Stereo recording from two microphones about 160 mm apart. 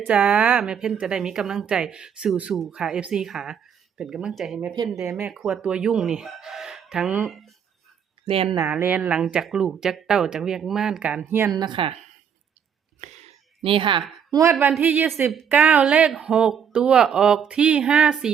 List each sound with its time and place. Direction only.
0.1 s speech: 10° right (ahead or behind)
8.3 s speech: 35° right (ahead or behind)
8.7 s a woman's voice: 10° right (ahead or behind)
11.5 s speech: 30° right (ahead or behind)
13.0 s a sound: 45° right (ahead or behind)
14.3 s a woman's voice: 20° right (ahead or behind)
14.8 s a woman's voice: 10° right (ahead or behind)